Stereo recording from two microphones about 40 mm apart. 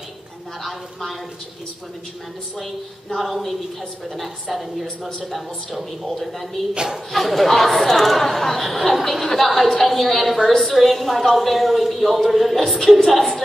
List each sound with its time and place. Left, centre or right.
2.6 s a woman's voice: centre
6.7 s a woman's voice: centre
7.1 s a woman's voice: centre